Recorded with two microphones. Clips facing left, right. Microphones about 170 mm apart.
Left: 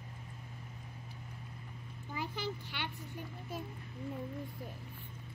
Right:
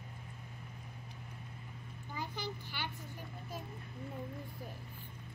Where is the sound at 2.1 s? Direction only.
Centre (ahead or behind).